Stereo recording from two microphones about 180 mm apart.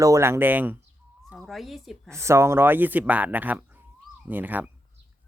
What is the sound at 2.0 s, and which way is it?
Speech, 15° right (ahead or behind).